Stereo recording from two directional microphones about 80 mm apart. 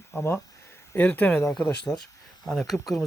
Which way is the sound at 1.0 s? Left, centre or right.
Left.